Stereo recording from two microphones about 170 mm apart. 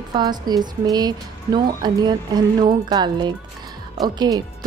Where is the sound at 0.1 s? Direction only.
25° right (ahead or behind).